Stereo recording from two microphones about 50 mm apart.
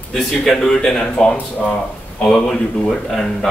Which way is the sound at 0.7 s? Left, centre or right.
Centre.